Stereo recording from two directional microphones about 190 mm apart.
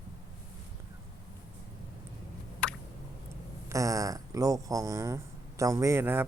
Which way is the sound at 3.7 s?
15° right (ahead or behind).